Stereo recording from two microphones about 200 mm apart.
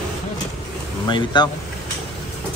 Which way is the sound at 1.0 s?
20° left (ahead or behind).